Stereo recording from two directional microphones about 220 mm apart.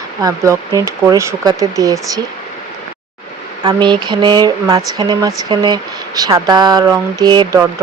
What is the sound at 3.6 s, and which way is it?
Speech, 20° right (ahead or behind).